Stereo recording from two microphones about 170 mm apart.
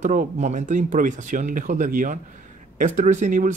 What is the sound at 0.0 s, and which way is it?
Speech, 50° right (ahead or behind).